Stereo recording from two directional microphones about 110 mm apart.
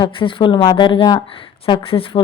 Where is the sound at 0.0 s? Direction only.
50° left (ahead or behind).